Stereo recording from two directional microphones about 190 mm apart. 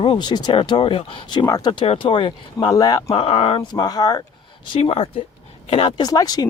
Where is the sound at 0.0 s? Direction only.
25° left (ahead or behind).